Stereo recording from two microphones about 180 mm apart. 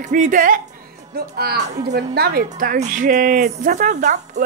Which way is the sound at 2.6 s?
50° right (ahead or behind).